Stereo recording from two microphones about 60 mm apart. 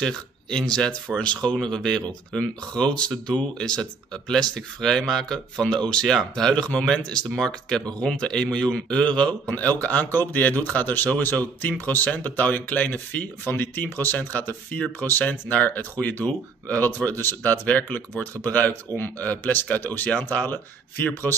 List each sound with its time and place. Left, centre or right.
0.0 s speech: centre
9.5 s speech: left